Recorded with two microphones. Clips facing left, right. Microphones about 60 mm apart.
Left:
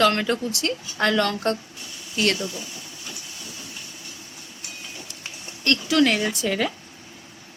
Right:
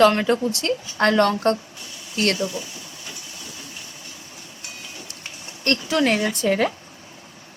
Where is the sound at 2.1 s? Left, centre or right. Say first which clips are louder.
Right 1 dB; right.